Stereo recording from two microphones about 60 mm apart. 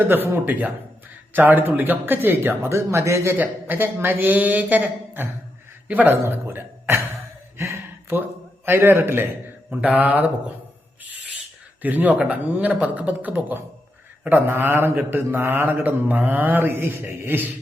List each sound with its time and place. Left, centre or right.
0.1 s mantra: right
2.6 s speech: right
3.3 s mantra: right
7.6 s a sound: right
8.6 s mantra: right
9.6 s a man's voice: right
11.8 s a man's voice: right
14.3 s mantra: right
16.6 s mantra: right